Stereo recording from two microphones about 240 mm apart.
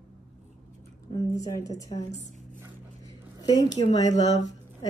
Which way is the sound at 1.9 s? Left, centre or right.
Left.